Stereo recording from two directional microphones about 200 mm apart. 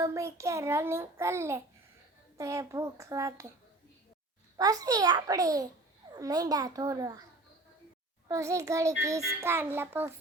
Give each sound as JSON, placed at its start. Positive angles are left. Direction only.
{"t": 0.0, "sound": "a child's voice", "side_deg": -15}
{"t": 4.5, "sound": "a child's voice", "side_deg": -20}
{"t": 8.3, "sound": "a child's voice", "side_deg": -15}